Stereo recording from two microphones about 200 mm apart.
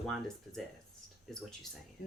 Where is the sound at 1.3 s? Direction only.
Centre (ahead or behind).